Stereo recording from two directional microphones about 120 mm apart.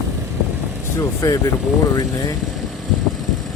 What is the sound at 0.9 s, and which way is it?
Speech, 30° left (ahead or behind).